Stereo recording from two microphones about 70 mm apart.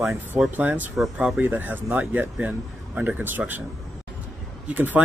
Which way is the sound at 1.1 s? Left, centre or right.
Centre.